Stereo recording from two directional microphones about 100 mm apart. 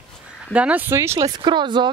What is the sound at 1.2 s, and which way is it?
Speech, 50° right (ahead or behind).